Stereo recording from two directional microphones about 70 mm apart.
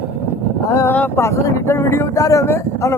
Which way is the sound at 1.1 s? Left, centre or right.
Left.